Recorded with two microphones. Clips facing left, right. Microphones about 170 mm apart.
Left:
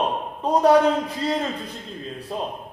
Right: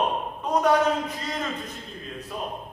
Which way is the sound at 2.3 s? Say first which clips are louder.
Left 5 dB; 30° left (ahead or behind).